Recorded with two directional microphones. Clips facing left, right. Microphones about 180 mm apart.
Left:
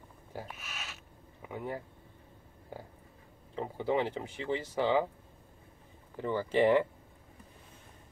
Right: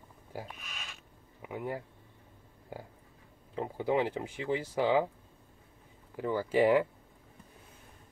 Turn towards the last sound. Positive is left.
turn(degrees=-5)  # may be behind; listen again after turning